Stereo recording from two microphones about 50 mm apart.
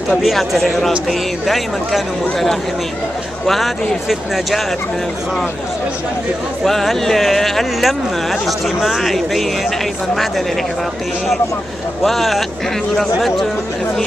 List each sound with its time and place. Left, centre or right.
0.1 s speech: centre
6.6 s speech: centre
12.0 s speech: centre